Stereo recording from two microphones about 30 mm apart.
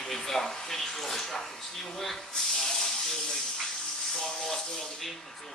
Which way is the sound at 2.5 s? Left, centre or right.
Centre.